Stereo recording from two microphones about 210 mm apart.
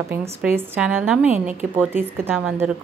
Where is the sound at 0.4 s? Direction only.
5° right (ahead or behind).